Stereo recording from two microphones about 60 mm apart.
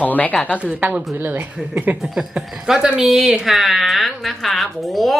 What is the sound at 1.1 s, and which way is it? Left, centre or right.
Speech, right.